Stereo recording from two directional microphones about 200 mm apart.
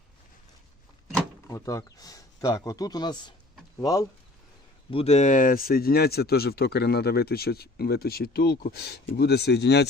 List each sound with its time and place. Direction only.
1.5 s speech: 15° left (ahead or behind)
4.9 s speech: 30° left (ahead or behind); by 9.8 s 55° left (ahead or behind)